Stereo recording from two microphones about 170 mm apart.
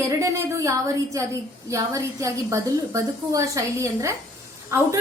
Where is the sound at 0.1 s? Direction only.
20° right (ahead or behind).